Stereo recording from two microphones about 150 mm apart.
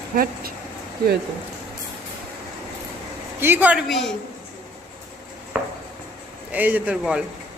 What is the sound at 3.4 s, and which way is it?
Speech, 15° right (ahead or behind).